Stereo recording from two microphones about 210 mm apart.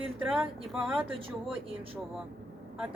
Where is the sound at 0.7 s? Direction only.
Centre (ahead or behind).